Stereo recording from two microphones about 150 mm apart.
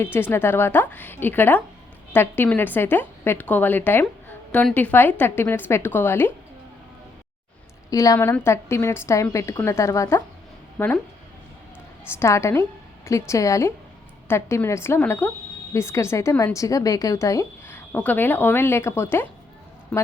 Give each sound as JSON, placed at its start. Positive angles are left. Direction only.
{"t": 0.0, "sound": "a woman's voice", "side_deg": 15}
{"t": 7.9, "sound": "a woman's voice", "side_deg": 20}
{"t": 12.2, "sound": "a woman's voice", "side_deg": 20}